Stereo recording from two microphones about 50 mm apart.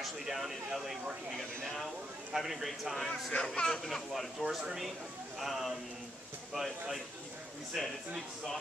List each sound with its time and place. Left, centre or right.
0.0 s speech: centre
2.3 s speech: centre
3.3 s speech: left
3.6 s speech: centre